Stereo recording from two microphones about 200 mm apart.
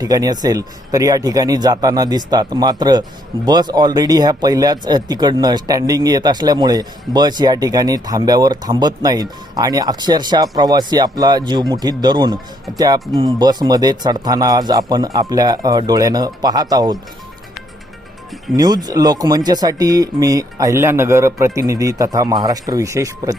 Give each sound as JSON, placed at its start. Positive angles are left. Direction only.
{"t": 0.0, "sound": "speech", "side_deg": -20}
{"t": 18.5, "sound": "speech", "side_deg": -20}